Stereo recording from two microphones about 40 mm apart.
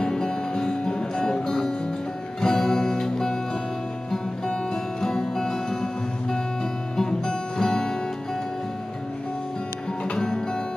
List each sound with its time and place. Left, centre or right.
0.0 s music: centre
5.0 s music: centre
7.0 s music: centre
10.1 s music: centre